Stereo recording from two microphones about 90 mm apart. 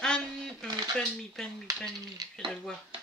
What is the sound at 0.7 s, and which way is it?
Speech, 50° right (ahead or behind).